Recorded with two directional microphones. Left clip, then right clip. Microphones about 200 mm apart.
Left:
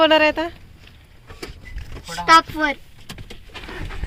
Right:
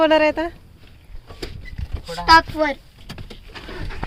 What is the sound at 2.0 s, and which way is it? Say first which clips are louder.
Speech: even; 50° right (ahead or behind).